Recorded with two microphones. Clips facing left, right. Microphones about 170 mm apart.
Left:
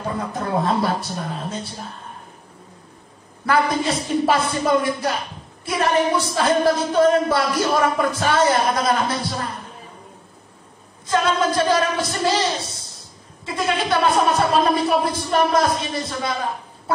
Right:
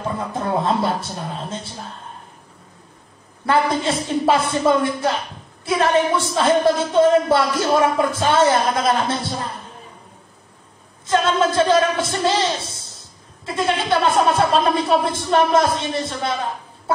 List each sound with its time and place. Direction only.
0.1 s speech: 25° right (ahead or behind)
3.4 s speech: 25° right (ahead or behind)
11.1 s speech: 25° right (ahead or behind)